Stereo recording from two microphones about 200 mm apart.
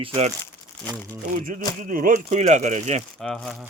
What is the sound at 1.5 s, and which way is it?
Speech, 45° right (ahead or behind).